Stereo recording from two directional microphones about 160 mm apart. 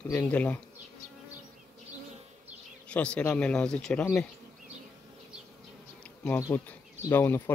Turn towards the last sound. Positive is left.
turn(degrees=15)  # may be behind; listen again after turning